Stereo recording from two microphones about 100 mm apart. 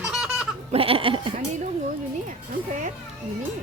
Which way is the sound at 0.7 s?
70° right (ahead or behind).